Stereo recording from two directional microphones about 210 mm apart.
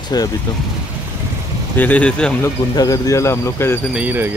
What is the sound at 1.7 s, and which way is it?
Speech, 5° left (ahead or behind).